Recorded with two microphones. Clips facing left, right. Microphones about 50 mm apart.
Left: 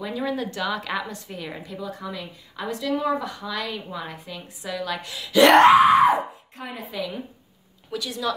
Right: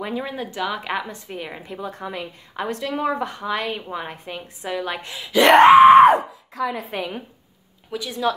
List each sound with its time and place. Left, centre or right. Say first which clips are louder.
0.0 s speech: even; right
1.8 s a woman's voice: right 4 dB; right
5.6 s a sound: right 8 dB; right
6.1 s a sound: right 4 dB; right
6.9 s a woman's voice: right 2 dB; right
7.9 s speech: right 4 dB; centre